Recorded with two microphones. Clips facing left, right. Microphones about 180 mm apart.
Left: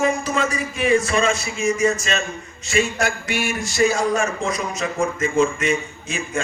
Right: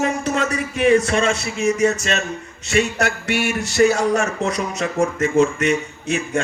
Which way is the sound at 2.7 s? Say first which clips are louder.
Right 2 dB; 70° right (ahead or behind).